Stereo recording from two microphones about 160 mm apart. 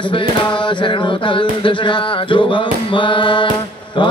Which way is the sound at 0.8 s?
30° left (ahead or behind).